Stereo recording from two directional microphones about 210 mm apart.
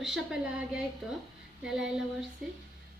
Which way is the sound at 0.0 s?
Centre (ahead or behind).